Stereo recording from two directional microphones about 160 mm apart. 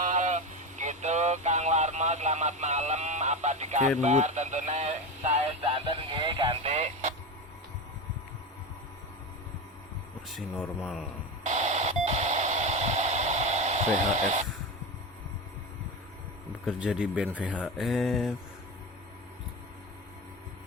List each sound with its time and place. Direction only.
0.0 s a sound: 50° right (ahead or behind)
10.2 s speech: centre (ahead or behind)
11.4 s radio: 45° right (ahead or behind)
16.6 s speech: 5° right (ahead or behind)